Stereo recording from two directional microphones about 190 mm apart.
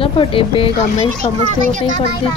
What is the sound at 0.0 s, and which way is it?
Speech, 30° left (ahead or behind).